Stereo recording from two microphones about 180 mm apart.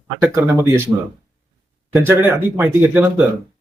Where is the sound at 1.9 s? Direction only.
15° right (ahead or behind).